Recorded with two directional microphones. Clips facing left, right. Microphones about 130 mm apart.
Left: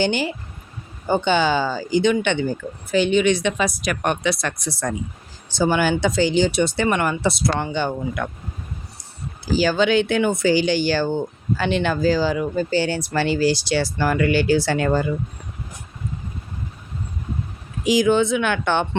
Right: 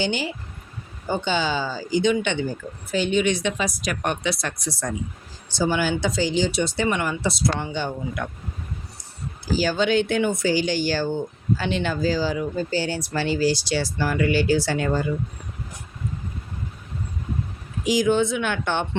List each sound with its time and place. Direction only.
0.0 s speech: 60° left (ahead or behind)
2.9 s speech: 80° left
9.6 s speech: 85° left; by 15.0 s 65° left (ahead or behind)
17.8 s speech: 90° left